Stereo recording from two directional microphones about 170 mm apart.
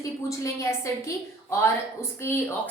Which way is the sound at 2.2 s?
15° left (ahead or behind).